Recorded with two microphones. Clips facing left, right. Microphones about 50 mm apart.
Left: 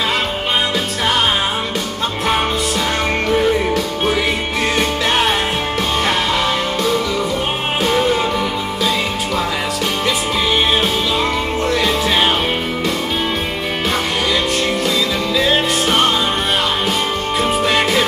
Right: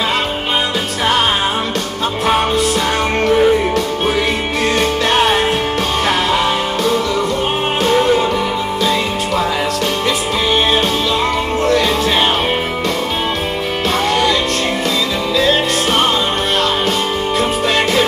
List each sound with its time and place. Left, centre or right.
3.3 s music: centre
4.7 s music: centre
11.6 s music: centre
15.3 s music: centre
17.4 s music: centre